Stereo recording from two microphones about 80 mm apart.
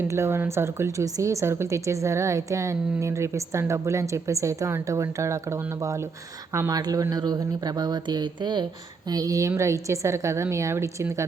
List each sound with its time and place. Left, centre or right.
0.1 s speech: right
9.0 s speech: right